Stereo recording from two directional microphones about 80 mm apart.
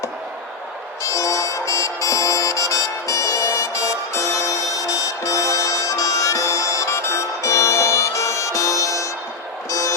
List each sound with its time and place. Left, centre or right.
1.0 s music: left